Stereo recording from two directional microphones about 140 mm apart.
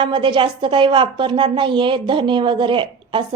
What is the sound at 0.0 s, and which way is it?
Speech, 35° right (ahead or behind).